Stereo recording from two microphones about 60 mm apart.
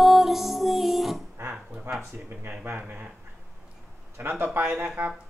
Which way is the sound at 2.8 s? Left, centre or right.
Right.